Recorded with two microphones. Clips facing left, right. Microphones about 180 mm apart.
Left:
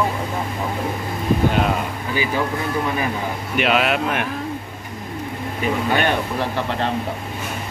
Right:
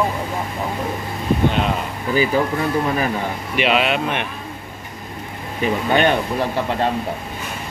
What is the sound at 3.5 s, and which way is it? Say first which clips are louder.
Speech: even; centre (ahead or behind).